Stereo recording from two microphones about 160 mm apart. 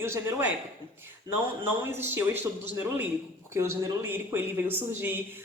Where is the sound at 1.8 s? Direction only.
15° right (ahead or behind).